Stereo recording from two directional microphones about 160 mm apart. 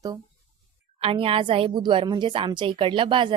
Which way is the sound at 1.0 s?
35° right (ahead or behind).